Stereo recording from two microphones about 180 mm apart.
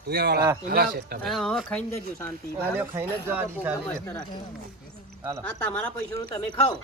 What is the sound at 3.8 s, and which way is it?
Speech, 10° left (ahead or behind).